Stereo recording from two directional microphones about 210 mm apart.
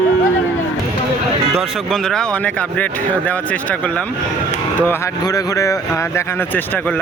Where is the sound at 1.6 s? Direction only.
Centre (ahead or behind).